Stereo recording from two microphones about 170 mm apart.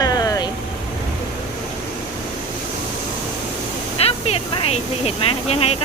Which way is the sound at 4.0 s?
35° left (ahead or behind).